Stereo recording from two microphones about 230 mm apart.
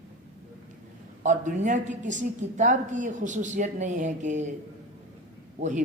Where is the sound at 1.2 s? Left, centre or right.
Right.